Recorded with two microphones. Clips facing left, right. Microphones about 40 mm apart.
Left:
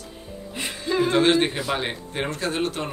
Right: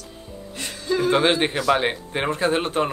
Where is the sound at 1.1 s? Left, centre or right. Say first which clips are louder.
Even; centre.